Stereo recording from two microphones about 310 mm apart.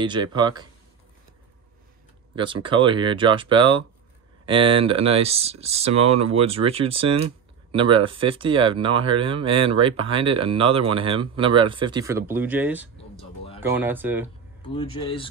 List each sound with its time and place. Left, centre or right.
0.0 s speech: centre
2.3 s speech: centre
14.7 s speech: centre